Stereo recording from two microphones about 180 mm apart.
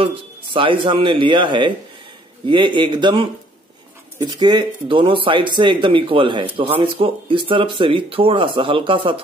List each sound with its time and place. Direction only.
0.0 s speech: 30° right (ahead or behind)